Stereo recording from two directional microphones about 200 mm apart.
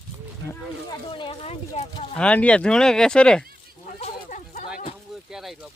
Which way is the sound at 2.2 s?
5° left (ahead or behind).